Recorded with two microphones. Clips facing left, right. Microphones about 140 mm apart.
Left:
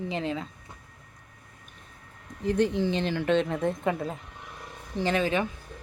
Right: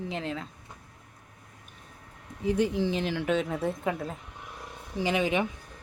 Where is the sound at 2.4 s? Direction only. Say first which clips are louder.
Left 1 dB; 10° right (ahead or behind).